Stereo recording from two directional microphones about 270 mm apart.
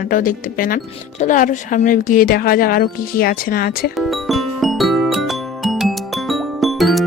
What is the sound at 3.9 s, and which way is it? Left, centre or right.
Music, centre.